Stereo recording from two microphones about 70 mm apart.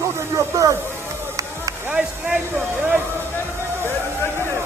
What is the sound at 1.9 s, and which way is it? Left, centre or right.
Speech, centre.